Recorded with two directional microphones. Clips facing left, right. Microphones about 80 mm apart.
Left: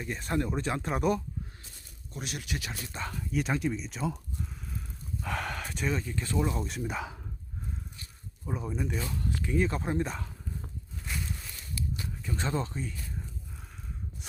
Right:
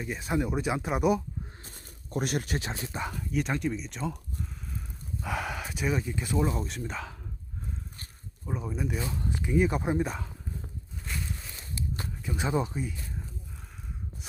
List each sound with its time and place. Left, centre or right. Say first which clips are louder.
0.0 s speech: right 2 dB; centre
1.6 s speech: right 4 dB; right
3.2 s speech: left 1 dB; centre
5.2 s speech: right 1 dB; centre
8.4 s speech: right 1 dB; centre
9.0 s speech: right 1 dB; right
11.0 s a sound: even; centre
11.3 s a sound: even; centre
11.8 s walk: even; right
12.2 s speech: right 3 dB; centre